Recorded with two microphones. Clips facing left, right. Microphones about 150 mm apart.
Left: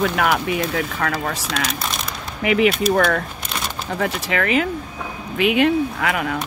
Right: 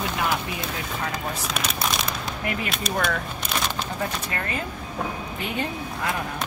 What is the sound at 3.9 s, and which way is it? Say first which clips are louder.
Speech: left 7 dB; 90° left.